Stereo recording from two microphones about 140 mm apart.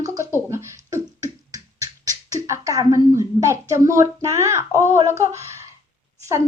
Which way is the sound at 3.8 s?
20° right (ahead or behind).